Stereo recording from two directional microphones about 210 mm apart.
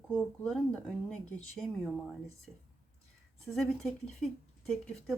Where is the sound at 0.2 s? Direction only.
5° left (ahead or behind).